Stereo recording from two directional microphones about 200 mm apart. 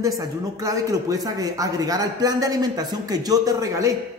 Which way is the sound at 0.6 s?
15° right (ahead or behind).